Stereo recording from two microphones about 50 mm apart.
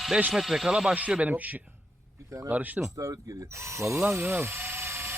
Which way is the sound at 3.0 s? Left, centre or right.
Right.